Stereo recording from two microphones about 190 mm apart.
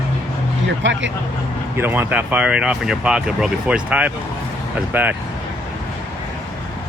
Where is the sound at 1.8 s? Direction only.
10° right (ahead or behind).